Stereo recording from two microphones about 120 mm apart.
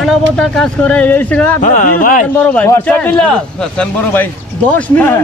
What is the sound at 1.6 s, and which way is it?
Speech, 90° left.